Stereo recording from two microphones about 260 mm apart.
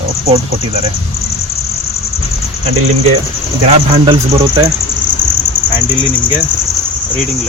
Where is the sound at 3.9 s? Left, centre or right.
Right.